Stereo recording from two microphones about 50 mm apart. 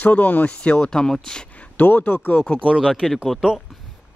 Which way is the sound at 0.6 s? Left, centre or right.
Centre.